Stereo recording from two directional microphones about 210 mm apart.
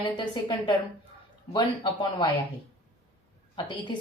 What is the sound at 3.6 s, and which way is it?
Speech, 20° left (ahead or behind).